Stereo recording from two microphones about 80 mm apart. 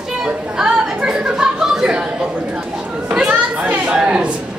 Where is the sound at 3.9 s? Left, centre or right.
Centre.